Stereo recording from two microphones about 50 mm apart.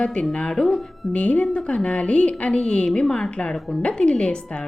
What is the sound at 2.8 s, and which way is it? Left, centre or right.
Speech, centre.